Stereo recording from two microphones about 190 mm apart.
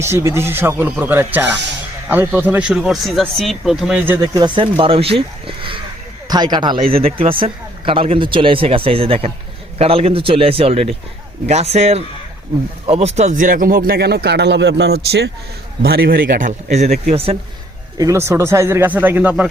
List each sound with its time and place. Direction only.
0.0 s speech: 15° right (ahead or behind)
4.2 s a man's voice: 20° right (ahead or behind)
17.9 s speech: 15° right (ahead or behind)